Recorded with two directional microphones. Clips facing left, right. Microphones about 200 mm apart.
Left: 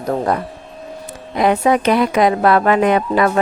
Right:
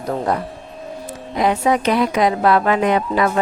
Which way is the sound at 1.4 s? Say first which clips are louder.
Left 3 dB; 60° left (ahead or behind).